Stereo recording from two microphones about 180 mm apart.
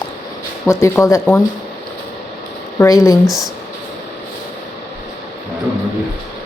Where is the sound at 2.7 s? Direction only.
20° left (ahead or behind).